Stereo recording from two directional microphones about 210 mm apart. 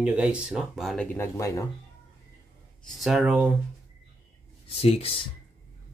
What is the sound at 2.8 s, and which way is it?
Speech, centre (ahead or behind).